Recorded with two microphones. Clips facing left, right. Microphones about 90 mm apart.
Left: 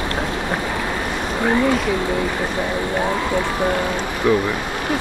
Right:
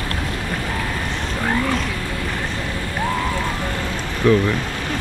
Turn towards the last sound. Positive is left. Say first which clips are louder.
# right 1 dB
turn(degrees=20)  # may be behind; listen again after turning